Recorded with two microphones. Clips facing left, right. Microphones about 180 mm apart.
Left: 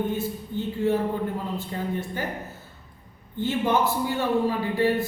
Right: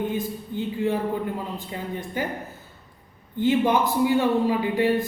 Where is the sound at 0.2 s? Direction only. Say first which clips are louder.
Even; 15° right (ahead or behind).